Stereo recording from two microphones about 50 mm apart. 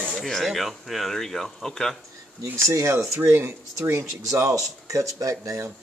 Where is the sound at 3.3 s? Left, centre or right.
Right.